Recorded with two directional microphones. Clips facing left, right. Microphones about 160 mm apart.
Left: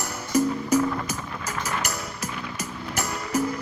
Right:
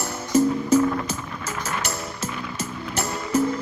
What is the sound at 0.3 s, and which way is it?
Music, 15° left (ahead or behind).